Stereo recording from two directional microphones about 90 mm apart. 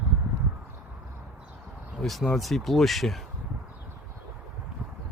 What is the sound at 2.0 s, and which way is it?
Speech, centre (ahead or behind).